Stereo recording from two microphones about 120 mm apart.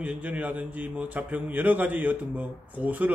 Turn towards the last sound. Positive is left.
turn(degrees=-15)  # may be behind; listen again after turning